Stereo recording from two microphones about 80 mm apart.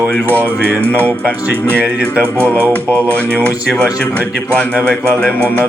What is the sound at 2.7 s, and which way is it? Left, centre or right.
Speech, centre.